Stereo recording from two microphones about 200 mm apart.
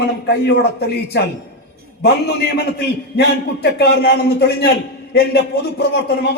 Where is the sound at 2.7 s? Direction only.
55° left (ahead or behind).